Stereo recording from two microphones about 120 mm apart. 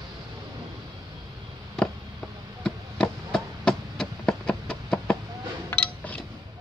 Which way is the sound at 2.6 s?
5° left (ahead or behind).